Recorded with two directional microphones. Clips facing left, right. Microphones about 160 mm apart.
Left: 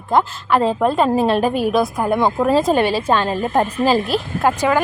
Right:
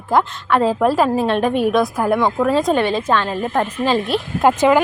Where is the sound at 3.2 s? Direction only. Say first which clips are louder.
Left 2 dB; 35° left (ahead or behind).